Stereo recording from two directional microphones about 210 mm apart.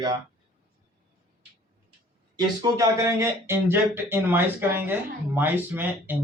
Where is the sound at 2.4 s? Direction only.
15° right (ahead or behind).